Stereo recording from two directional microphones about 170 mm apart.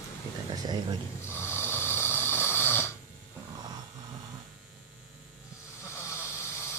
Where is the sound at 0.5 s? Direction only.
25° right (ahead or behind).